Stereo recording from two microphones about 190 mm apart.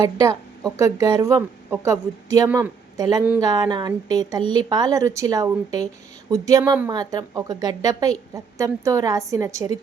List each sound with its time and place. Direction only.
0.2 s a woman's voice: 20° right (ahead or behind)